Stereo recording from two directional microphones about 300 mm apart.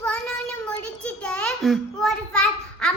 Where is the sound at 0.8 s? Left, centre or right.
Centre.